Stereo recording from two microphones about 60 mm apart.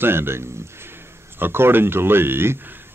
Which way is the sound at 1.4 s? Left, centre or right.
Right.